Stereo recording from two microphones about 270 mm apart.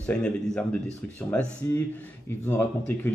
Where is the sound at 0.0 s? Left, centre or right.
Centre.